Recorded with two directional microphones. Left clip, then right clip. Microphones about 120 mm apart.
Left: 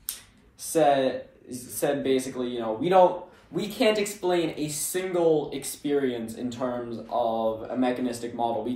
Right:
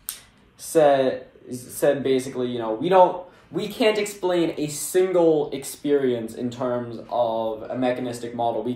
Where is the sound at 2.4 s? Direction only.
45° left (ahead or behind).